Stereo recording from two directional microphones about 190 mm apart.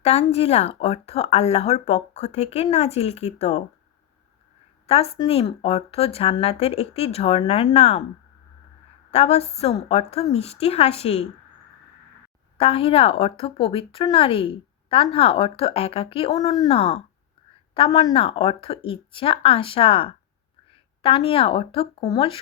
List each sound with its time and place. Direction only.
0.0 s speech: 35° left (ahead or behind)
4.9 s speech: 30° left (ahead or behind)
9.1 s speech: 35° left (ahead or behind)
12.5 s a woman's voice: 30° left (ahead or behind)